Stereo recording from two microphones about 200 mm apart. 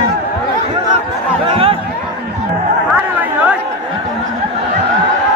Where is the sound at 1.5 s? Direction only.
30° right (ahead or behind).